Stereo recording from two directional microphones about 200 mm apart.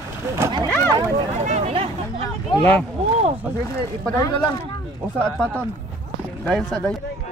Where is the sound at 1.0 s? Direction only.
30° right (ahead or behind).